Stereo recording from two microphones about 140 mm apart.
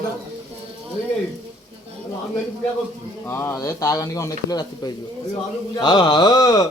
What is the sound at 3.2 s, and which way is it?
A man's voice, 15° left (ahead or behind).